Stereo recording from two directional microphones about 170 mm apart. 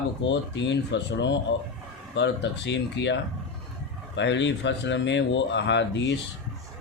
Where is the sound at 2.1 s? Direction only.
90° left.